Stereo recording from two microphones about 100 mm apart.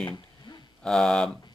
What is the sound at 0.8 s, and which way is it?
Speech, 10° left (ahead or behind).